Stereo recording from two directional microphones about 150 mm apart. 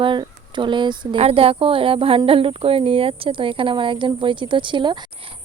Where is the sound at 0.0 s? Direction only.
30° right (ahead or behind).